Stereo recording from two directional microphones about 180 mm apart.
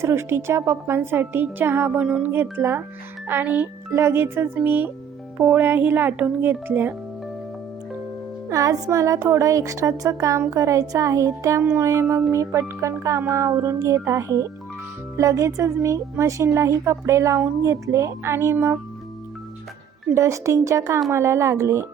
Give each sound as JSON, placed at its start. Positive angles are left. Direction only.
{"t": 0.0, "sound": "speech", "side_deg": -15}
{"t": 8.4, "sound": "speech", "side_deg": -20}
{"t": 20.1, "sound": "speech", "side_deg": -15}